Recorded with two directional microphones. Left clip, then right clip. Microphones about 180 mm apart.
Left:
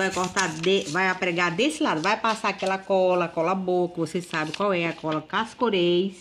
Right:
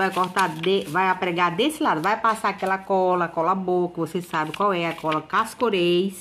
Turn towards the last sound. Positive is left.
turn(degrees=10)  # may be behind; listen again after turning